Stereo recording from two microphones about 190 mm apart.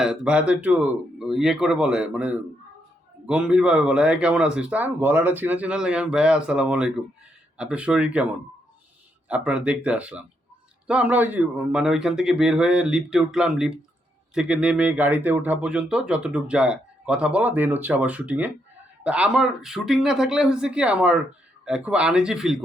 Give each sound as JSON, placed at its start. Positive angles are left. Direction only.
{"t": 0.0, "sound": "speech", "side_deg": -5}
{"t": 9.3, "sound": "speech", "side_deg": -5}